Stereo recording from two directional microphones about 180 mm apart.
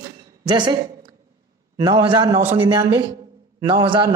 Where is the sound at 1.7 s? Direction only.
20° right (ahead or behind).